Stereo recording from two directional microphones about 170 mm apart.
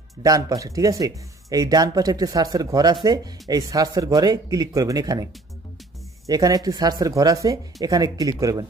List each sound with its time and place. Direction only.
0.2 s speech: 20° right (ahead or behind)